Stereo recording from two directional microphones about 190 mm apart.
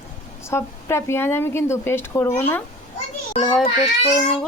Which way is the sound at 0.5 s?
15° left (ahead or behind).